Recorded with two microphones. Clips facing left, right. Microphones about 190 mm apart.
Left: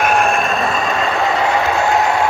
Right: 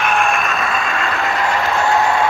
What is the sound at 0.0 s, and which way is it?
Vehicle, 40° left (ahead or behind).